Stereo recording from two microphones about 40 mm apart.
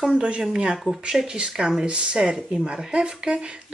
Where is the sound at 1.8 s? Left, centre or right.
Right.